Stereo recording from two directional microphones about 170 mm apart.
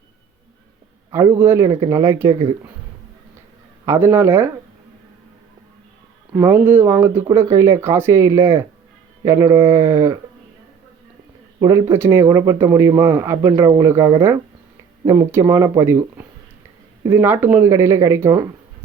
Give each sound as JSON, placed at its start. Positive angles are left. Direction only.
{"t": 1.1, "sound": "speech", "side_deg": -15}
{"t": 3.8, "sound": "speech", "side_deg": -15}
{"t": 6.3, "sound": "speech", "side_deg": -15}
{"t": 11.6, "sound": "speech", "side_deg": -15}